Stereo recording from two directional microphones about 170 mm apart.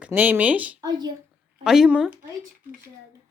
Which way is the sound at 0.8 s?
25° right (ahead or behind).